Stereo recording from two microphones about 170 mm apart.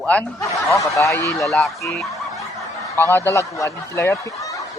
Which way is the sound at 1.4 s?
Centre (ahead or behind).